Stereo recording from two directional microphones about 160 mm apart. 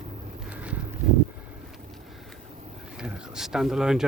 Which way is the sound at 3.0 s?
Centre (ahead or behind).